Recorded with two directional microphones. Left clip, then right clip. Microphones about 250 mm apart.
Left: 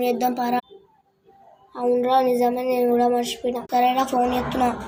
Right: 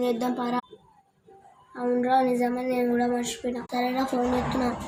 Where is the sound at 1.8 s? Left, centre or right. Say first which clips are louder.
Left 4 dB; centre.